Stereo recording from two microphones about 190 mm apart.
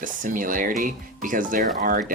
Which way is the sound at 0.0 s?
45° right (ahead or behind).